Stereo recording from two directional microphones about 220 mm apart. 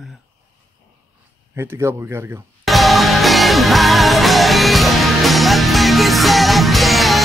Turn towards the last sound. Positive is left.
turn(degrees=0)  # may be behind; listen again after turning